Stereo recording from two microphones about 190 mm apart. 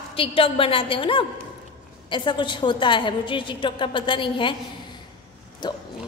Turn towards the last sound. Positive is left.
turn(degrees=25)  # may be behind; listen again after turning